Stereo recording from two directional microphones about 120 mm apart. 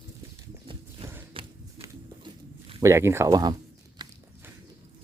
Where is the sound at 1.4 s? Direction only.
45° right (ahead or behind).